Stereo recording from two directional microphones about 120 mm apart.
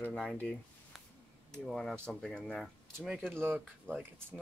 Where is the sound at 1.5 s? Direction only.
5° left (ahead or behind).